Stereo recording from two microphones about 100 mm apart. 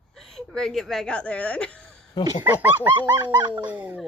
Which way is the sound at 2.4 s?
20° right (ahead or behind).